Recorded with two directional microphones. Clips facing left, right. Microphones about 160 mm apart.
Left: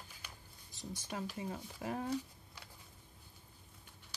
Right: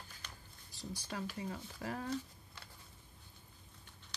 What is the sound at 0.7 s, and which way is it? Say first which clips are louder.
Speech: even; 20° left (ahead or behind).